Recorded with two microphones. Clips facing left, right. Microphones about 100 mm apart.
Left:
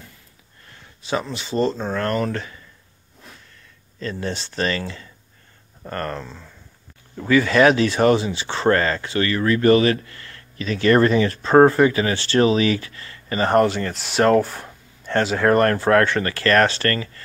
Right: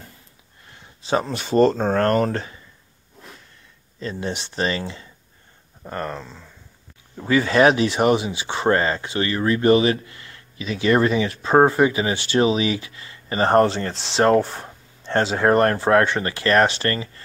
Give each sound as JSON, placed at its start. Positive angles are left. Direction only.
{"t": 0.7, "sound": "a sound", "side_deg": -20}
{"t": 1.1, "sound": "speech", "side_deg": -45}
{"t": 4.0, "sound": "speech", "side_deg": -20}
{"t": 5.9, "sound": "speech", "side_deg": -10}
{"t": 7.2, "sound": "speech", "side_deg": -25}
{"t": 13.4, "sound": "speech", "side_deg": -30}